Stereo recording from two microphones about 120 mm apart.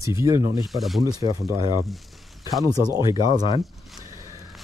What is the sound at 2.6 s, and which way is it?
Speech, 30° right (ahead or behind).